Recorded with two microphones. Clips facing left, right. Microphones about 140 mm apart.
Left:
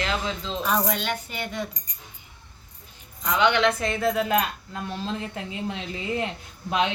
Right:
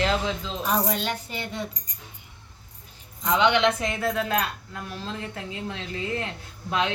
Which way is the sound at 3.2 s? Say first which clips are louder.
Even; 25° right (ahead or behind).